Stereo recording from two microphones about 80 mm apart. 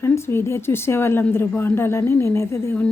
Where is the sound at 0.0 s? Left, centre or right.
Left.